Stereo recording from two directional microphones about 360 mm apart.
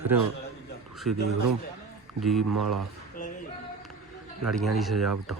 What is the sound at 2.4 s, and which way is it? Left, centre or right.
Speech, right.